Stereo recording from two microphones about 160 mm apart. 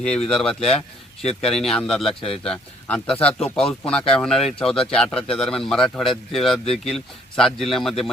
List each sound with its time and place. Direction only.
0.3 s speech: 5° left (ahead or behind)
1.2 s speech: 40° left (ahead or behind)
1.5 s speech: 5° left (ahead or behind)